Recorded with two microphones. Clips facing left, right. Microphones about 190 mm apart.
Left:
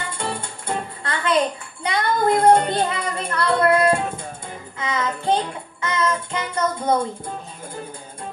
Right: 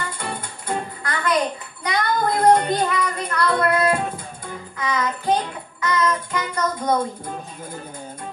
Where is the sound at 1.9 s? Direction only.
25° left (ahead or behind).